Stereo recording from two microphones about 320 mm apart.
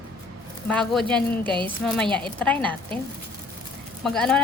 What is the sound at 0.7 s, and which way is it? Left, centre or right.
A woman's voice, centre.